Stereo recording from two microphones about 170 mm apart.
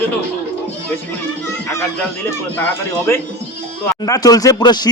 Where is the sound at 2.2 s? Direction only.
15° left (ahead or behind).